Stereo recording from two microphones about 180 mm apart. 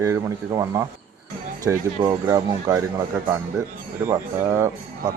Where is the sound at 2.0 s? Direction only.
20° right (ahead or behind).